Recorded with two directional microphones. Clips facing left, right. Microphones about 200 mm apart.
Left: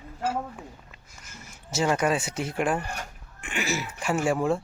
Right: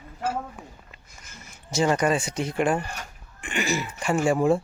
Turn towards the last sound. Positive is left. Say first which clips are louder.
# right 3 dB
turn(degrees=0)  # may be behind; listen again after turning